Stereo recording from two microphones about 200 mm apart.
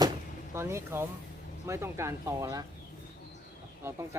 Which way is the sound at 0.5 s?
15° right (ahead or behind).